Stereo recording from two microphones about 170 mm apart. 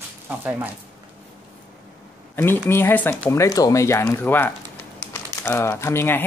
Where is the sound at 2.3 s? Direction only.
15° left (ahead or behind).